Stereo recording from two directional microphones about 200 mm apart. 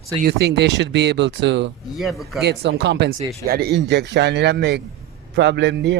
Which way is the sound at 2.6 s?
60° right (ahead or behind).